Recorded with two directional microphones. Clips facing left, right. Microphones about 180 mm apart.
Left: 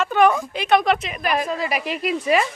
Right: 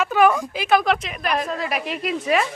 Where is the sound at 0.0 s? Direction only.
5° right (ahead or behind).